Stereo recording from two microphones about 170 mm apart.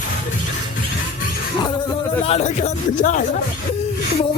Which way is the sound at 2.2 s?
40° left (ahead or behind).